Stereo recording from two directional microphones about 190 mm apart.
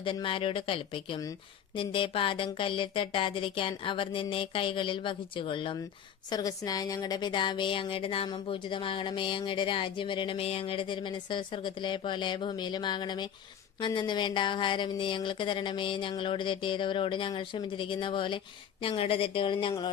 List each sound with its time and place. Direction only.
0.0 s speech: 25° left (ahead or behind)